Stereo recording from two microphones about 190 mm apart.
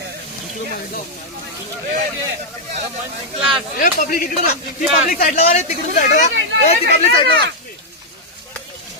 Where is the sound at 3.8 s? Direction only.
50° left (ahead or behind); by 7.3 s 30° left (ahead or behind).